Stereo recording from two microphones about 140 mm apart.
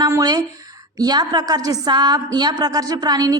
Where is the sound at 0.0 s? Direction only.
25° right (ahead or behind).